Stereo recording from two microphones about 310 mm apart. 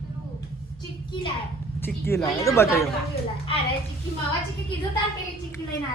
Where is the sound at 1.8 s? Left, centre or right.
Centre.